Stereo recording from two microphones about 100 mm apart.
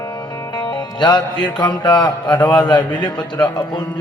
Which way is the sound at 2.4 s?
10° left (ahead or behind).